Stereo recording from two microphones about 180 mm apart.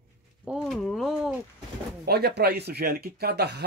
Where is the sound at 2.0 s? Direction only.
65° right (ahead or behind).